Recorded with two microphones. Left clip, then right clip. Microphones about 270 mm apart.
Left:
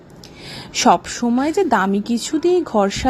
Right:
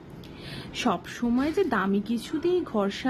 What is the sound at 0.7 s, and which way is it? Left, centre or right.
A woman's voice, left.